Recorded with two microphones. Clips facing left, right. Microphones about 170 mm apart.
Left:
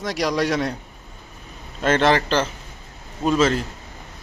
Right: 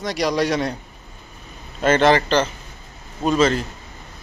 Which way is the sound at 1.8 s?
Centre (ahead or behind).